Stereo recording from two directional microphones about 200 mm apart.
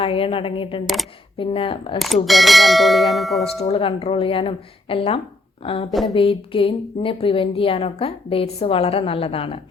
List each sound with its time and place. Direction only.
0.0 s speech: 25° left (ahead or behind)
2.2 s speech: centre (ahead or behind)
3.4 s speech: 30° left (ahead or behind)
5.9 s speech: centre (ahead or behind)
6.1 s speech: 25° left (ahead or behind)